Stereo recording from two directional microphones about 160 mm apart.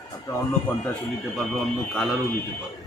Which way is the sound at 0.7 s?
10° left (ahead or behind).